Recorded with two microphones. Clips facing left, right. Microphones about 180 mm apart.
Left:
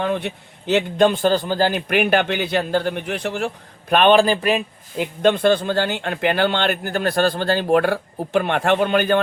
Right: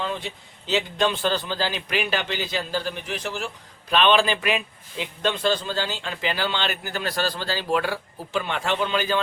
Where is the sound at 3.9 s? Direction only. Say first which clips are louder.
Left 6 dB; 50° left (ahead or behind).